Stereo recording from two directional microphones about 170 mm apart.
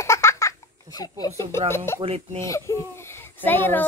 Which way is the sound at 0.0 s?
15° left (ahead or behind).